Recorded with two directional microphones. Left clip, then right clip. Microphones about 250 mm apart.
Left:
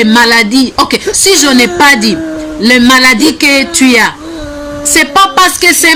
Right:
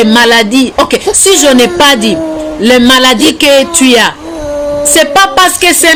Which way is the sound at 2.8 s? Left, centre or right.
Centre.